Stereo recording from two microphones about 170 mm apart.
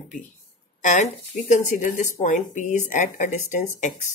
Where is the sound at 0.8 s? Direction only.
45° left (ahead or behind).